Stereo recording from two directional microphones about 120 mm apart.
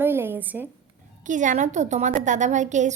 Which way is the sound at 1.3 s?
90° right.